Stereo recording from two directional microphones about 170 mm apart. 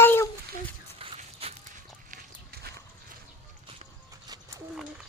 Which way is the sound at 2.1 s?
65° right (ahead or behind).